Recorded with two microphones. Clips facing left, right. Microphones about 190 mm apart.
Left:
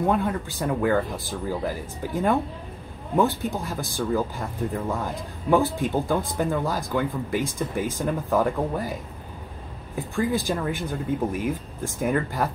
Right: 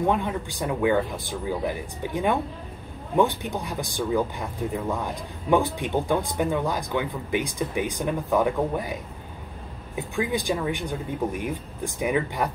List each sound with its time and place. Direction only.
0.0 s speech: 5° left (ahead or behind)
9.9 s speech: centre (ahead or behind)